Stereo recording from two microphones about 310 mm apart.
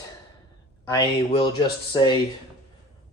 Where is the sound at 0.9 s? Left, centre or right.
Centre.